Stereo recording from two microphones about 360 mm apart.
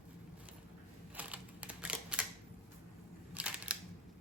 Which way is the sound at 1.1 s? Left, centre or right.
Centre.